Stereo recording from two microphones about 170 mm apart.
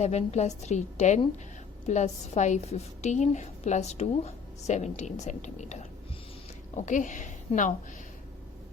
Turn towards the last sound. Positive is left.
turn(degrees=50)  # may be behind; listen again after turning